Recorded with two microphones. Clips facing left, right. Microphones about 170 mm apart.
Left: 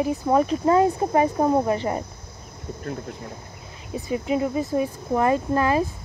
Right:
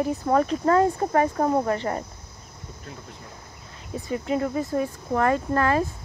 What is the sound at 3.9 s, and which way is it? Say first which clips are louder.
Speech: left 2 dB; 15° left (ahead or behind).